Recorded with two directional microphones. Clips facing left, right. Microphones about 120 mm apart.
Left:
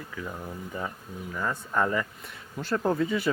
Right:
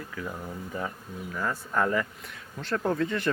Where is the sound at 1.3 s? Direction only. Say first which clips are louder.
Even; centre (ahead or behind).